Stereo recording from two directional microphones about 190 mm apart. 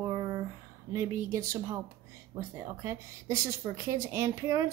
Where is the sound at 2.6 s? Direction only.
15° right (ahead or behind).